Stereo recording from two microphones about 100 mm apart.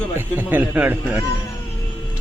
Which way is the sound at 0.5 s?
15° right (ahead or behind).